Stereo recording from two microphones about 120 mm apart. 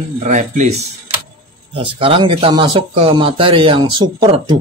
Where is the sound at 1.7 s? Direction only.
50° right (ahead or behind).